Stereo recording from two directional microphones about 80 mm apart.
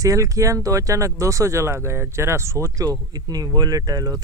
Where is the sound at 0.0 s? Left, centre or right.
Right.